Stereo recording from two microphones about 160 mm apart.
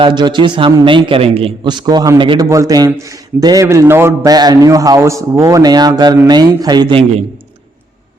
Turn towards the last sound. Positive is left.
turn(degrees=-35)  # may be behind; listen again after turning